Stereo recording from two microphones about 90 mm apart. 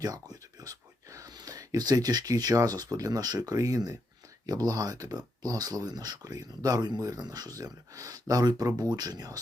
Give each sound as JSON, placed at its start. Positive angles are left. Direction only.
{"t": 0.0, "sound": "speech", "side_deg": -45}